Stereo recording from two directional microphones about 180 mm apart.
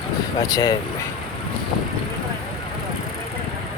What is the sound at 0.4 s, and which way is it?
Speech, 20° left (ahead or behind).